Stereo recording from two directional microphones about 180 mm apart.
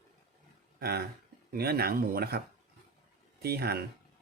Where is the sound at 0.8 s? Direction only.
60° right (ahead or behind).